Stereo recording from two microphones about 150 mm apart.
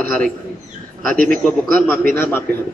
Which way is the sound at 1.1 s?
65° right (ahead or behind).